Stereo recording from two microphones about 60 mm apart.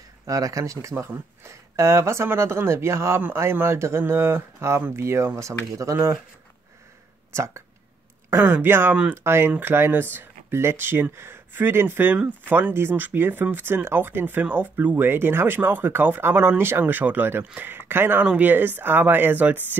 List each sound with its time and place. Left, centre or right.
0.3 s speech: right
7.3 s speech: right
8.3 s speech: right
18.2 s speech: right